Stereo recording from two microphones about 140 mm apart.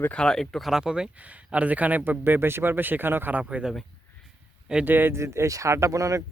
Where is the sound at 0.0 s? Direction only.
10° left (ahead or behind).